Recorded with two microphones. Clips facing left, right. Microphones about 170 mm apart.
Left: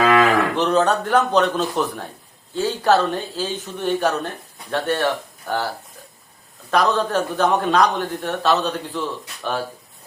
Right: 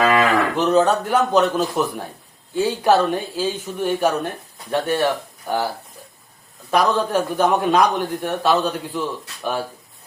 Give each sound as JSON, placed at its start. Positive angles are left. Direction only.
{"t": 0.5, "sound": "a man's voice", "side_deg": -10}
{"t": 6.7, "sound": "a man's voice", "side_deg": -10}